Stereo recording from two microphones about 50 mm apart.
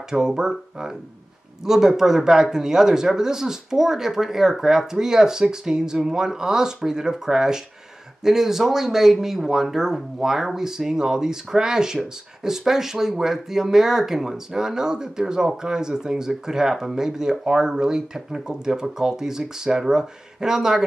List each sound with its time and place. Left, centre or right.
0.1 s speech: centre